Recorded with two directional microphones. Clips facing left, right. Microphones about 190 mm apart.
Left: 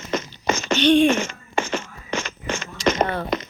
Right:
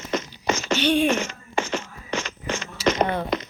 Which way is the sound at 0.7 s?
10° right (ahead or behind).